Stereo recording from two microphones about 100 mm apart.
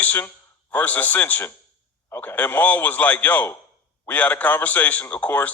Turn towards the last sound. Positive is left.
turn(degrees=15)  # may be behind; listen again after turning